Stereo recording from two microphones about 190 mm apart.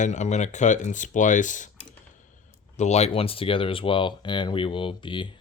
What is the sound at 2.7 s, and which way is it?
Speech, 35° left (ahead or behind).